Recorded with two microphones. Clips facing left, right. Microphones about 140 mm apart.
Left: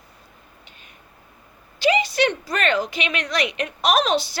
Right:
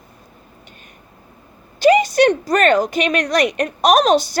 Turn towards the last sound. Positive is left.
turn(degrees=-45)  # may be behind; listen again after turning